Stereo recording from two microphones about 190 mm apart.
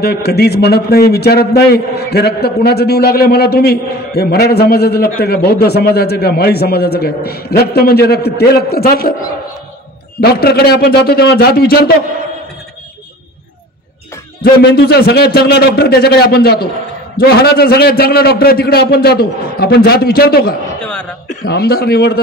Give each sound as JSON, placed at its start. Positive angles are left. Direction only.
{"t": 0.0, "sound": "a man's voice", "side_deg": 55}
{"t": 10.2, "sound": "a man's voice", "side_deg": 55}
{"t": 14.4, "sound": "a man's voice", "side_deg": 60}
{"t": 20.8, "sound": "chuckle", "side_deg": 5}
{"t": 21.3, "sound": "a man's voice", "side_deg": 55}